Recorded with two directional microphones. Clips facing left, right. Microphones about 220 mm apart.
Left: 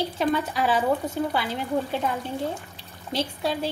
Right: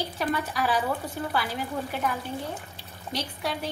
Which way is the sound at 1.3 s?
25° left (ahead or behind).